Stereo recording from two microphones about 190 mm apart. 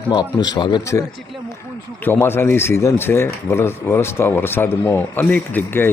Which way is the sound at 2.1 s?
10° left (ahead or behind).